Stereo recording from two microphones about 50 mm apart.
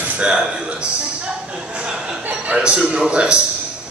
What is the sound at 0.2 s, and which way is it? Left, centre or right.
A man's voice, centre.